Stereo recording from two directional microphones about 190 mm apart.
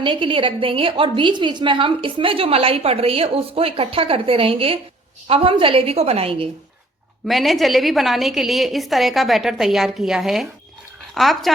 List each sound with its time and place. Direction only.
0.0 s a woman's voice: 25° right (ahead or behind)
7.3 s a woman's voice: centre (ahead or behind)